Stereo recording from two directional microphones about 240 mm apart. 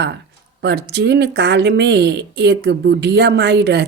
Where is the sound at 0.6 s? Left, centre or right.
Right.